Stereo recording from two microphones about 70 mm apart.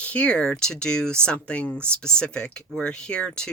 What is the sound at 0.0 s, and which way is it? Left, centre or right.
Speech, centre.